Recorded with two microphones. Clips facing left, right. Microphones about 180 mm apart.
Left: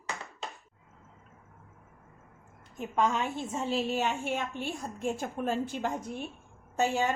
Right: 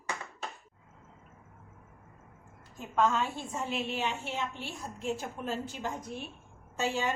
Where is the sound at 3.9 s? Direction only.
45° left (ahead or behind).